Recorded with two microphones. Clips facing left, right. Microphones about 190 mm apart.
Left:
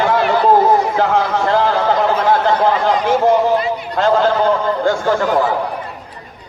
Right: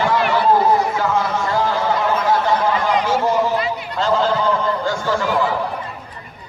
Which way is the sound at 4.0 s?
55° left (ahead or behind).